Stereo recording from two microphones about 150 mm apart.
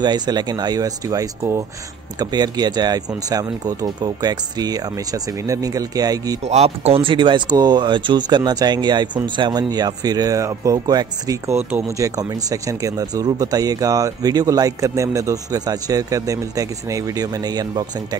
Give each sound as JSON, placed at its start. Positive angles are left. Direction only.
{"t": 0.0, "sound": "speech", "side_deg": -30}
{"t": 6.4, "sound": "speech", "side_deg": -45}